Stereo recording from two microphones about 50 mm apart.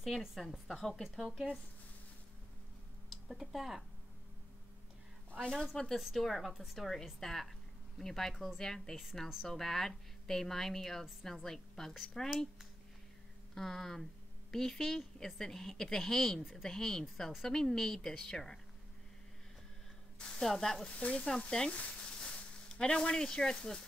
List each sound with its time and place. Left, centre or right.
0.4 s a woman's voice: centre
1.0 s a woman's voice: centre
3.1 s speech: centre
5.4 s a woman's voice: centre
5.9 s a woman's voice: centre
13.6 s a woman's voice: centre
20.2 s speech: centre
21.0 s frying: left
21.7 s speech: centre